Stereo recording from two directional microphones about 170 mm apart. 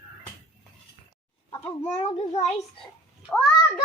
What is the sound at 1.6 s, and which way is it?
Speech, 40° left (ahead or behind).